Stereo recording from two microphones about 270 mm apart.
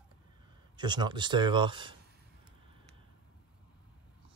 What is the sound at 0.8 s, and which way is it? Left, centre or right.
Speech, centre.